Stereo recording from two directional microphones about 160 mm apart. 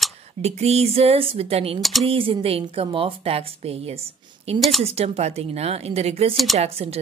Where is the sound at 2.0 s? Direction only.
35° right (ahead or behind).